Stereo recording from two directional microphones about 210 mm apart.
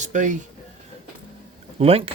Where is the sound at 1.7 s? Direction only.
30° right (ahead or behind).